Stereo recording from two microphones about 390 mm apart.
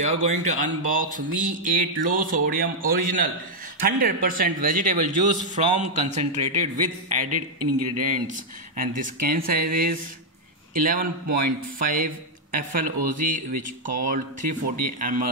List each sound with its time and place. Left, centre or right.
0.0 s speech: centre
7.2 s speech: right
8.7 s a man's voice: right